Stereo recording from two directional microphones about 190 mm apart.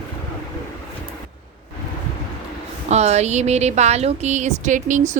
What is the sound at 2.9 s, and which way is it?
A woman's voice, 35° right (ahead or behind).